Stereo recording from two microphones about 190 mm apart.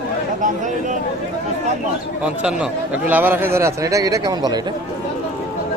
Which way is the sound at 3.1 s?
10° right (ahead or behind).